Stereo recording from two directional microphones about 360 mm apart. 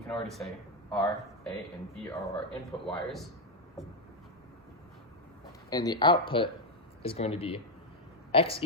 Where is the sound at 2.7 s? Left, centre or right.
Centre.